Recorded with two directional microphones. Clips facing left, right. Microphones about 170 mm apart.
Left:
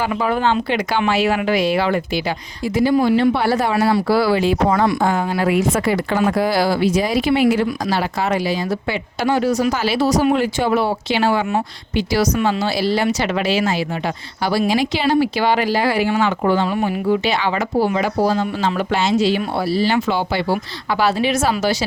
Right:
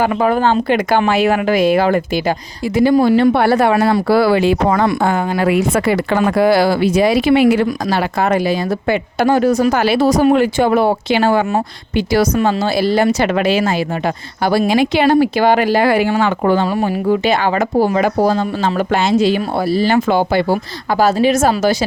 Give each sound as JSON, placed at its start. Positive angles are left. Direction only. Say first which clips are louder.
{"t": 0.0, "sound": "speech", "louder": "right 5 dB", "side_deg": -50}